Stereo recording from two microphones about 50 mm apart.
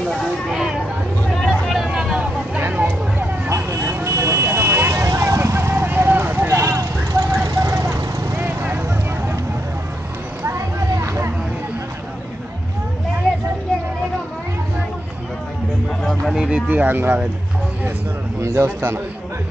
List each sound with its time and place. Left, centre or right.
0.5 s a sound: centre
1.3 s vehicle: centre
1.9 s vehicle: centre
3.4 s vehicle: right
4.5 s vehicle: right
5.9 s vehicle: right
7.1 s vehicle: right
8.4 s vehicle: right
10.4 s a sound: right
16.0 s music: centre
16.3 s music: centre
16.6 s music: right
18.4 s a man's voice: right